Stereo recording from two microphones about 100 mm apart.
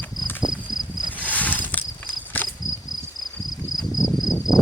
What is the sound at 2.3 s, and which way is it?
Insect, 15° left (ahead or behind).